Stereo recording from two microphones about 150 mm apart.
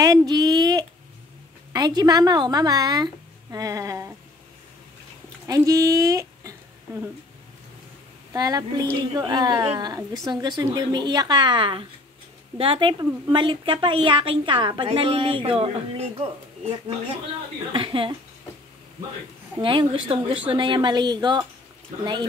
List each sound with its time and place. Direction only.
0.0 s a sound: 25° right (ahead or behind)
1.7 s a woman's voice: 25° right (ahead or behind)
5.5 s a woman's voice: 25° right (ahead or behind)
8.3 s a woman's voice: 25° right (ahead or behind)
17.7 s a woman's voice: 35° right (ahead or behind)
19.6 s a woman's voice: 35° right (ahead or behind)